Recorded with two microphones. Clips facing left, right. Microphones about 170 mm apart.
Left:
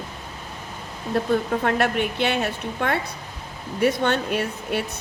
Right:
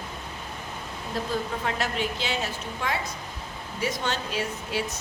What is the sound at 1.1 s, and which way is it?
Speech, 60° left (ahead or behind).